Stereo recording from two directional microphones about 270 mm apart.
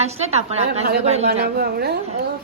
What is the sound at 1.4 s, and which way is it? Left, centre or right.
Speech, right.